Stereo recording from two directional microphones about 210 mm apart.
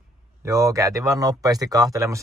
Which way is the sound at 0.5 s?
15° right (ahead or behind).